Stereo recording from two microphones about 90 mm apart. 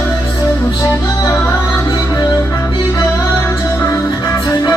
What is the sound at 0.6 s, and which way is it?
Music, 35° left (ahead or behind).